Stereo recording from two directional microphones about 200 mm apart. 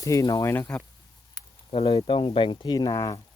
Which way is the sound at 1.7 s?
30° left (ahead or behind).